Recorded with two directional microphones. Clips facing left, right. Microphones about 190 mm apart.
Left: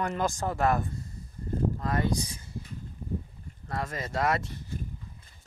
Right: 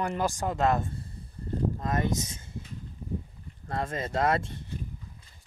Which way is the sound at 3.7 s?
25° right (ahead or behind).